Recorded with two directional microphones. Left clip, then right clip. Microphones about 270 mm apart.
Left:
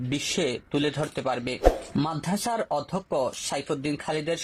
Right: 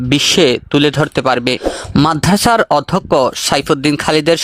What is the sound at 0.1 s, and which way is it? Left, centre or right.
Speech, right.